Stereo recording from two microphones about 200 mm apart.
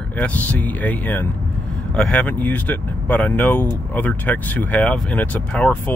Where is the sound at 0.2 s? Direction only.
5° left (ahead or behind).